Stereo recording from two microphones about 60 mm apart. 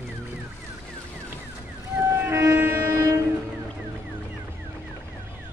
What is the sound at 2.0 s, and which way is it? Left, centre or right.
Train, right.